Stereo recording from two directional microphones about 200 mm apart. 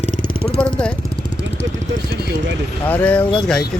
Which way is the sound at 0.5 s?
5° left (ahead or behind).